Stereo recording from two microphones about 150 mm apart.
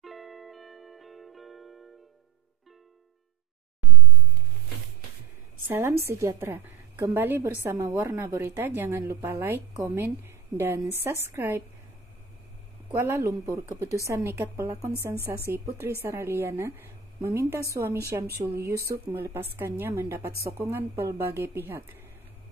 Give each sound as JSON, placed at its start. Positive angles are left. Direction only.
{"t": 0.0, "sound": "music", "side_deg": 0}
{"t": 5.7, "sound": "a woman's voice", "side_deg": -15}
{"t": 12.9, "sound": "a woman's voice", "side_deg": -20}